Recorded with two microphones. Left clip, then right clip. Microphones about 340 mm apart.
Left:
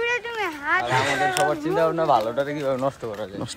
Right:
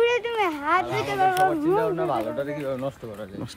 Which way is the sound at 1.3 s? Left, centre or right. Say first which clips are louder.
Right 1 dB; left.